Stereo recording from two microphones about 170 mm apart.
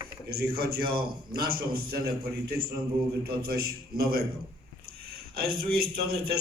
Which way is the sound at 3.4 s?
65° right (ahead or behind).